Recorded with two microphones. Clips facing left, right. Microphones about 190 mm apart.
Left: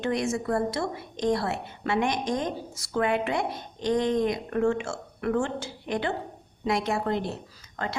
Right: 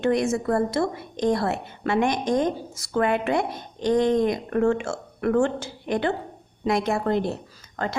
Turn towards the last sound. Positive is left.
turn(degrees=-45)  # may be behind; listen again after turning